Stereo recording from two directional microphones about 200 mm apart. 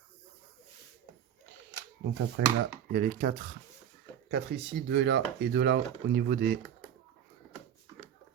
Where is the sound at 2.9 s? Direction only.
45° right (ahead or behind).